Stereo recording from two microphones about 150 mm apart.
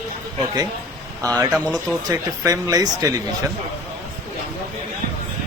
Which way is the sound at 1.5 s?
5° right (ahead or behind).